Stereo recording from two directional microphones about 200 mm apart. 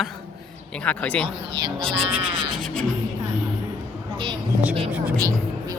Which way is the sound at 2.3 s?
25° right (ahead or behind).